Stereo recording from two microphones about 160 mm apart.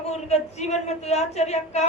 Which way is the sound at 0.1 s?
45° left (ahead or behind).